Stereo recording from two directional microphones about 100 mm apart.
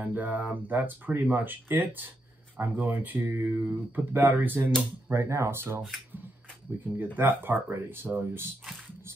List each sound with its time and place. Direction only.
0.0 s speech: 15° right (ahead or behind)
5.1 s speech: 30° right (ahead or behind)
7.2 s speech: 20° right (ahead or behind)